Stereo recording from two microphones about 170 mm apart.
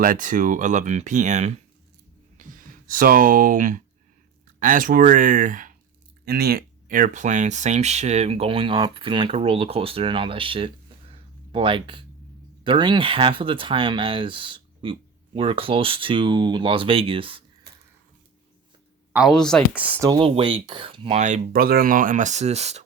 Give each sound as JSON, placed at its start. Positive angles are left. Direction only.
{"t": 0.0, "sound": "speech", "side_deg": -50}
{"t": 2.4, "sound": "speech", "side_deg": -50}
{"t": 6.2, "sound": "speech", "side_deg": -70}
{"t": 11.1, "sound": "a sound", "side_deg": -30}
{"t": 12.6, "sound": "speech", "side_deg": -30}
{"t": 19.1, "sound": "speech", "side_deg": 0}
{"t": 20.1, "sound": "speech", "side_deg": -30}
{"t": 21.2, "sound": "speech", "side_deg": -45}